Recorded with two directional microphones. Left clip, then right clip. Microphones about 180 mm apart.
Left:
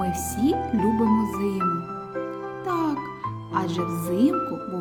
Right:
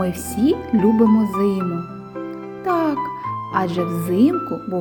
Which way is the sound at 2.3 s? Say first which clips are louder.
Right 9 dB; 10° right (ahead or behind).